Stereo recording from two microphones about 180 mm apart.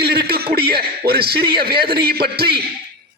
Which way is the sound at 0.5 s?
60° right (ahead or behind).